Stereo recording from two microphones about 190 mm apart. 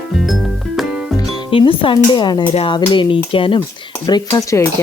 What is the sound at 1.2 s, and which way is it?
Speech, 25° left (ahead or behind).